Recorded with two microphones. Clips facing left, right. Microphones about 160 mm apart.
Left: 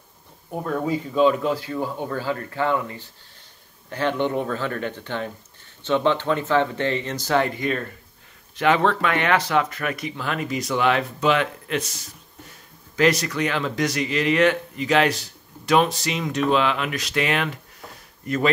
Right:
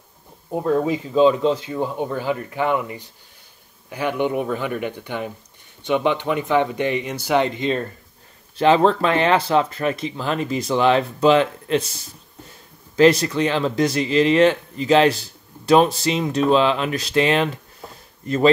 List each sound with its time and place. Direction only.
0.5 s speech: 25° right (ahead or behind)
17.8 s a sound: 30° right (ahead or behind)
18.2 s speech: 30° right (ahead or behind)